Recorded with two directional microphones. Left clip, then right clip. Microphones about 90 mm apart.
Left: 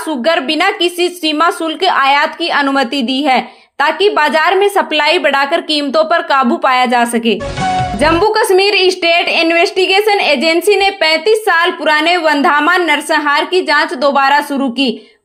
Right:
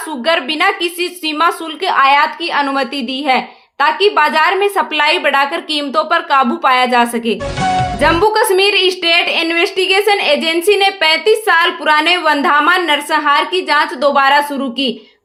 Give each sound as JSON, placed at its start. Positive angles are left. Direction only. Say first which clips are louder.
{"t": 0.3, "sound": "a woman's voice", "louder": "left 1 dB", "side_deg": 55}
{"t": 7.6, "sound": "music", "louder": "right 1 dB", "side_deg": 0}
{"t": 7.9, "sound": "a woman's voice", "louder": "left 1 dB", "side_deg": 40}